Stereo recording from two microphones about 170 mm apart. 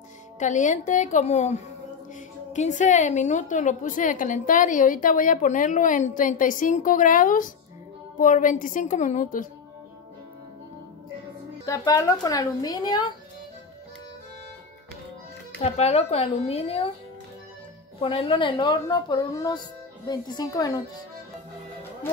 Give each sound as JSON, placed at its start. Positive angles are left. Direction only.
{"t": 0.4, "sound": "a woman's voice", "side_deg": 45}
{"t": 11.6, "sound": "a woman's voice", "side_deg": 20}
{"t": 15.6, "sound": "speech", "side_deg": 40}
{"t": 18.0, "sound": "a woman's voice", "side_deg": 30}